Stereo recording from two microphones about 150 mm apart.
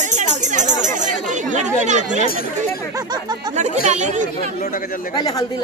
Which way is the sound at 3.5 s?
50° right (ahead or behind).